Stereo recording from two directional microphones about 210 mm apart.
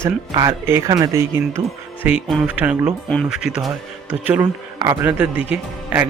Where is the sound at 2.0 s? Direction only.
5° right (ahead or behind).